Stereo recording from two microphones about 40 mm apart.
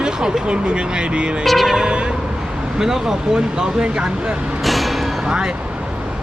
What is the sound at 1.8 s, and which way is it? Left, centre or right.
Speech, right.